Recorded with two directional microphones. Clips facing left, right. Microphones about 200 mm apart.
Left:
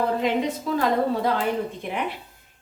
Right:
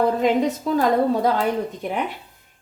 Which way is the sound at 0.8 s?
45° right (ahead or behind).